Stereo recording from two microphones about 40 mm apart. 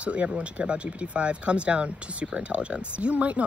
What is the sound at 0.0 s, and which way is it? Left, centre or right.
Speech, right.